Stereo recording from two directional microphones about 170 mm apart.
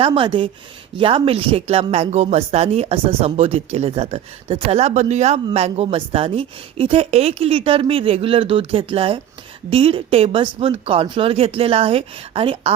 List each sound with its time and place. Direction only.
0.0 s speech: 30° right (ahead or behind)